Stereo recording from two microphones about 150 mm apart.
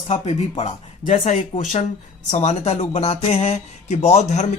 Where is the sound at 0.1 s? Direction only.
45° left (ahead or behind).